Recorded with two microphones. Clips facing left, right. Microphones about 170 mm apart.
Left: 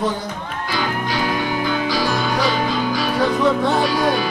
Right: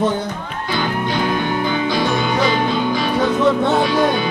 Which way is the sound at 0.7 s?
5° left (ahead or behind).